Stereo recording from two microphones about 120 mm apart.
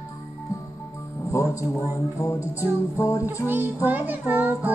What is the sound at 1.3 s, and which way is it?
Speech, 25° left (ahead or behind).